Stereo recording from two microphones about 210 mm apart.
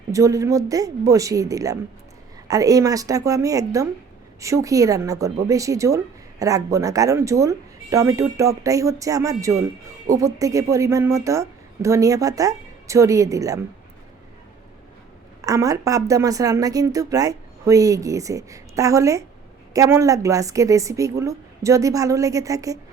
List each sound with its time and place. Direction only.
0.1 s speech: 15° right (ahead or behind)
15.4 s speech: 15° right (ahead or behind)